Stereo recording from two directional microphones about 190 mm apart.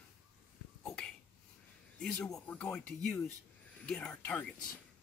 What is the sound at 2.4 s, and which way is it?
Speech, 5° left (ahead or behind).